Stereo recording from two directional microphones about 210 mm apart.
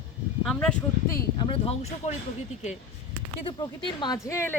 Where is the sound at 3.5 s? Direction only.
20° left (ahead or behind).